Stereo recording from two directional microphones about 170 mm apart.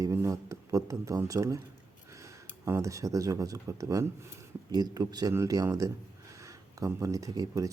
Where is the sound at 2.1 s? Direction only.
15° right (ahead or behind).